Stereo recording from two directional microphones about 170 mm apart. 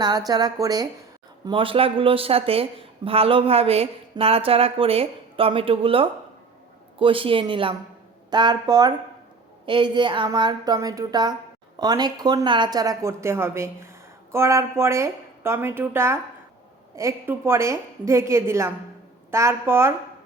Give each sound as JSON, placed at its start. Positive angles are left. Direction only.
{"t": 0.0, "sound": "a woman's voice", "side_deg": -25}